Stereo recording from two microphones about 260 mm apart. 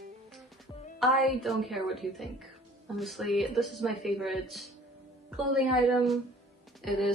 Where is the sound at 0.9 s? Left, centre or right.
Centre.